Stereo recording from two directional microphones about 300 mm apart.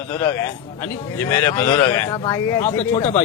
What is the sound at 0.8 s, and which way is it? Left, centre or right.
A man's voice, centre.